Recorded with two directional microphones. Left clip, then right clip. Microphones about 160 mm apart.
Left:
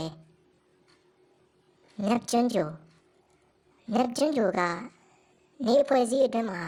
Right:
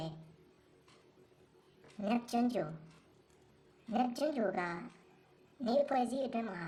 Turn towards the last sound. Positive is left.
turn(degrees=45)  # may be behind; listen again after turning